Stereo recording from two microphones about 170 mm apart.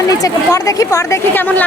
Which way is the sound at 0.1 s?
20° left (ahead or behind).